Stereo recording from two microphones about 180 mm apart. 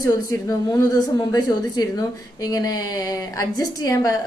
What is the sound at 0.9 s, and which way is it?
A woman's voice, 20° left (ahead or behind).